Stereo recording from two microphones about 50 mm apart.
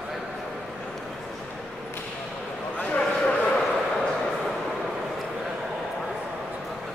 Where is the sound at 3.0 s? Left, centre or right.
Left.